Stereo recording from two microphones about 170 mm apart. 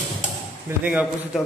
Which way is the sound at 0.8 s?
5° right (ahead or behind).